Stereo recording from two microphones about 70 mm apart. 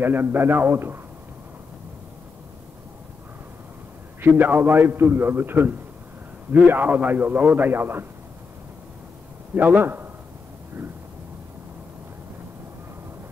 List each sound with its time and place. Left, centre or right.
0.0 s a man's voice: right
4.4 s a man's voice: right
9.6 s a man's voice: right